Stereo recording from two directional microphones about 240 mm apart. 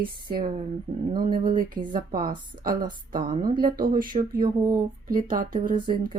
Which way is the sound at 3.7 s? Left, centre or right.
Right.